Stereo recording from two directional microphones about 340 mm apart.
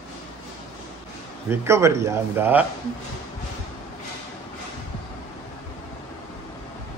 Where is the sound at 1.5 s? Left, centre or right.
Centre.